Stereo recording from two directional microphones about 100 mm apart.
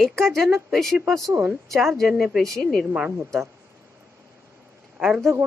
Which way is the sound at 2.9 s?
15° right (ahead or behind).